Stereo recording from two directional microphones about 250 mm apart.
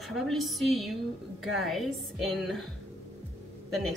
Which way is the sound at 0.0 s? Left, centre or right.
Centre.